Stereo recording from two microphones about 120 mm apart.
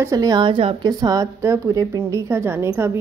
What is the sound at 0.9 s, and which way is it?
A woman's voice, 30° right (ahead or behind).